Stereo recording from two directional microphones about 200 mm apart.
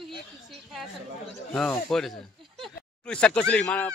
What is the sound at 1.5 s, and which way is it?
Speech, 5° left (ahead or behind).